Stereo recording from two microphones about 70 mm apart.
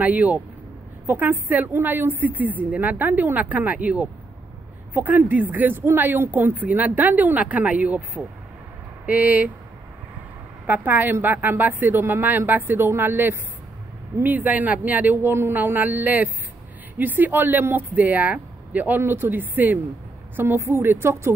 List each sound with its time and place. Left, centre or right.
0.0 s speech: right
10.7 s a woman's voice: right